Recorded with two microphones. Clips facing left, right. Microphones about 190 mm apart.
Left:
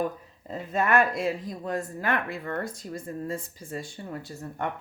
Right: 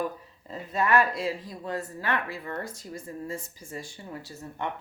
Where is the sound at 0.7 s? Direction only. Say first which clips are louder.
Left 1 dB; 50° left (ahead or behind).